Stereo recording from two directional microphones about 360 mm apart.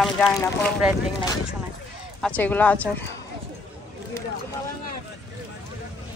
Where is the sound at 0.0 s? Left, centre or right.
Centre.